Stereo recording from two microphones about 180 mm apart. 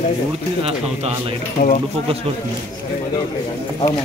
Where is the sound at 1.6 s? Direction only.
50° left (ahead or behind).